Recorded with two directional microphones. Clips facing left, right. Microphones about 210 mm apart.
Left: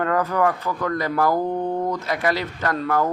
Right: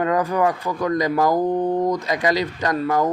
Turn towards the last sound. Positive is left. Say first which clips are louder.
# right 2 dB
turn(degrees=-15)  # may be behind; listen again after turning